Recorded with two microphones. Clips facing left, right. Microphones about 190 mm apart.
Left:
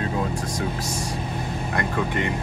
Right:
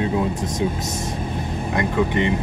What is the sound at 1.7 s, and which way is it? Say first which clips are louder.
Speech: right 5 dB; 20° right (ahead or behind).